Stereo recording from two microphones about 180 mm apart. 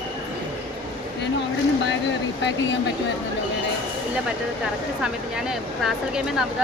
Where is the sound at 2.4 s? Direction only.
80° left.